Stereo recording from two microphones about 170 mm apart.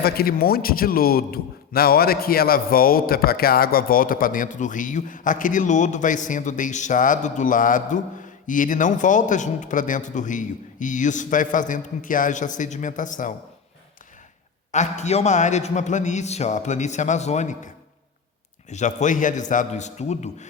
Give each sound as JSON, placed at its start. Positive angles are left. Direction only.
{"t": 0.0, "sound": "a man's voice", "side_deg": 65}
{"t": 14.7, "sound": "a man's voice", "side_deg": 45}
{"t": 18.7, "sound": "a man's voice", "side_deg": 45}